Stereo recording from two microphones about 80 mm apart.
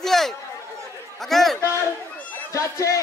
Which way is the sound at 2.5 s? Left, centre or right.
Left.